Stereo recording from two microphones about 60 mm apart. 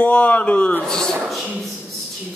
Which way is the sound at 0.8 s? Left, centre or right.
Centre.